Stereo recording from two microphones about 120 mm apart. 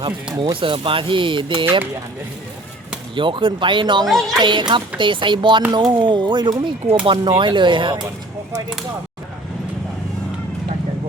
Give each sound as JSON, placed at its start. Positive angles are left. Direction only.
{"t": 0.3, "sound": "speech", "side_deg": -45}
{"t": 3.2, "sound": "speech", "side_deg": -45}
{"t": 4.0, "sound": "speech", "side_deg": 0}
{"t": 4.4, "sound": "speech", "side_deg": -40}